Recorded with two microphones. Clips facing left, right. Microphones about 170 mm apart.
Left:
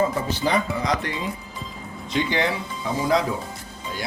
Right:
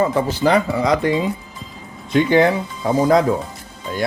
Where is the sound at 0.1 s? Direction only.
80° right.